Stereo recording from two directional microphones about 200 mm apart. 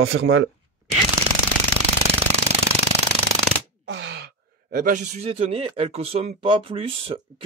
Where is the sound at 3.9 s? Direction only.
65° right (ahead or behind).